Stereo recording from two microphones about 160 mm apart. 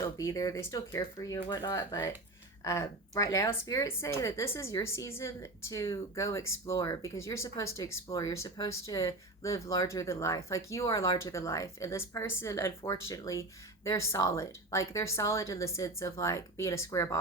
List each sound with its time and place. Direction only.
0.0 s speech: 20° left (ahead or behind)